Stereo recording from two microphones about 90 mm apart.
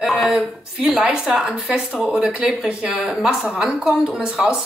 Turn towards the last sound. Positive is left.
turn(degrees=-10)  # may be behind; listen again after turning